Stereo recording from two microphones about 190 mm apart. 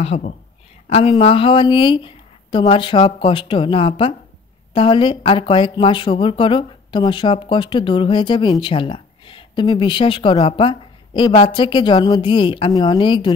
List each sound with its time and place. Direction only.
0.0 s a woman's voice: 35° left (ahead or behind)